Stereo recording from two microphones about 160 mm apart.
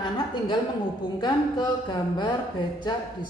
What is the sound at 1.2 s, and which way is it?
Speech, 30° left (ahead or behind).